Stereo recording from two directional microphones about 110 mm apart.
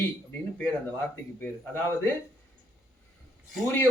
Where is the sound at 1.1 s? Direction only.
20° left (ahead or behind).